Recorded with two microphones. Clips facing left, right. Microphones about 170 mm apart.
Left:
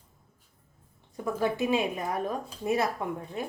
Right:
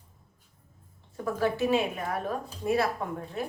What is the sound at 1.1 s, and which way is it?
A woman's voice, 15° left (ahead or behind).